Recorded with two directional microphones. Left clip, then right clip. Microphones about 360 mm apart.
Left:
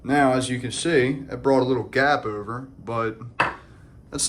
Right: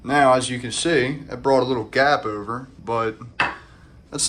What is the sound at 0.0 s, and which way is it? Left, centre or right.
Speech, centre.